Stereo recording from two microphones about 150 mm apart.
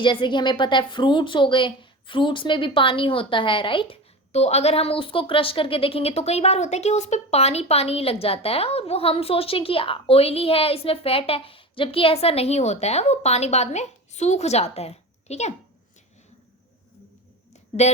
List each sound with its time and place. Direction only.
0.0 s a woman's voice: 30° left (ahead or behind)
4.3 s a woman's voice: 45° left (ahead or behind)
17.5 s a sound: 45° left (ahead or behind)